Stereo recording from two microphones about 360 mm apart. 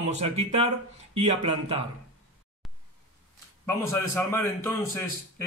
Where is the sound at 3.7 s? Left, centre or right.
Centre.